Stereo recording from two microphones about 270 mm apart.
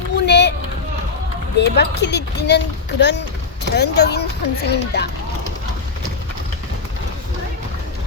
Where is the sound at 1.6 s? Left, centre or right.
Left.